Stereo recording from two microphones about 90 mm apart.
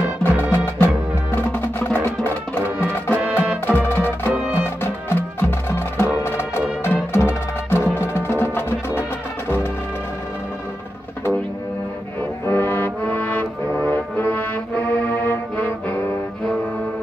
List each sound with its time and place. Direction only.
0.2 s music: 25° left (ahead or behind)
4.3 s music: 15° right (ahead or behind)
4.6 s music: 25° left (ahead or behind)
12.4 s music: 25° left (ahead or behind)